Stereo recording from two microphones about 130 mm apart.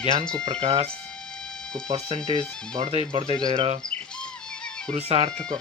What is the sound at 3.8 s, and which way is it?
Music, 5° left (ahead or behind).